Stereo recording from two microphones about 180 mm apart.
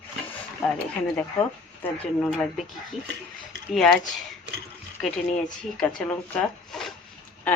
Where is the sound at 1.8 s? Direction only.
5° left (ahead or behind).